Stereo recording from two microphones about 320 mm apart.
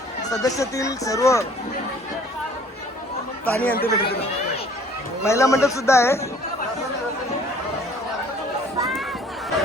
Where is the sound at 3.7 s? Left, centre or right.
Left.